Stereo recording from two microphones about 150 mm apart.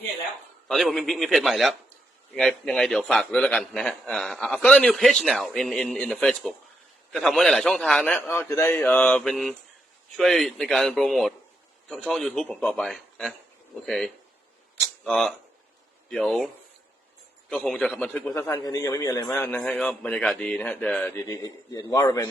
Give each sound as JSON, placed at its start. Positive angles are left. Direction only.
{"t": 0.7, "sound": "a man's voice", "side_deg": 0}
{"t": 17.5, "sound": "a man's voice", "side_deg": 5}
{"t": 21.2, "sound": "a man's voice", "side_deg": 20}